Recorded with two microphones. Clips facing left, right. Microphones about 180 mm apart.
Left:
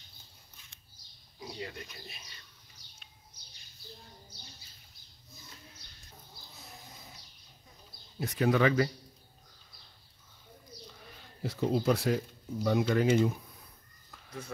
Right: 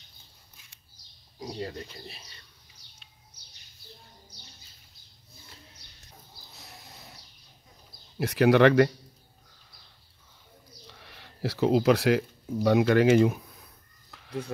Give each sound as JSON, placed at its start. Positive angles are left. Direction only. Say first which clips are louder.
{"t": 1.4, "sound": "speech", "louder": "right 6 dB", "side_deg": -40}
{"t": 6.6, "sound": "sheep", "louder": "right 2 dB", "side_deg": -75}
{"t": 8.2, "sound": "speech", "louder": "right 7 dB", "side_deg": -80}
{"t": 10.9, "sound": "speech", "louder": "right 1 dB", "side_deg": -75}
{"t": 14.1, "sound": "a sound", "louder": "right 9 dB", "side_deg": -75}